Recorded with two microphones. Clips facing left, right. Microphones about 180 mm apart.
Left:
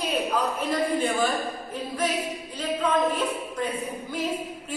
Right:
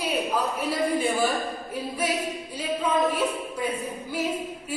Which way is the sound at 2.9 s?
10° right (ahead or behind).